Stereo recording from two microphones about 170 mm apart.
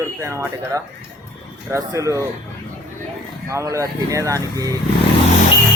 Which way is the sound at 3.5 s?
20° right (ahead or behind).